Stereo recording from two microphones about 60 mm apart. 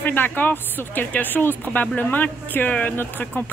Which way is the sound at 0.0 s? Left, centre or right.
Left.